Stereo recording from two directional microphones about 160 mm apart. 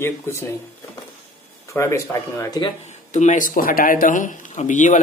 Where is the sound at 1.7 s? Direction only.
15° left (ahead or behind).